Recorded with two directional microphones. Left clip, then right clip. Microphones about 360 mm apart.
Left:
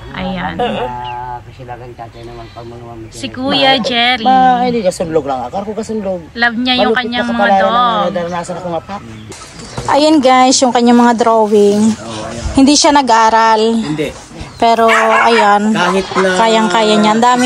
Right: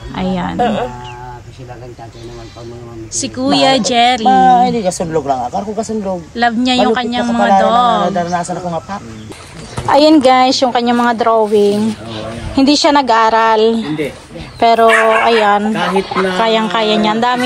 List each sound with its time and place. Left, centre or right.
0.2 s a sound: centre
0.6 s livestock: centre
3.2 s speech: centre
6.3 s a man's voice: centre
8.1 s speech: right
9.8 s speech: centre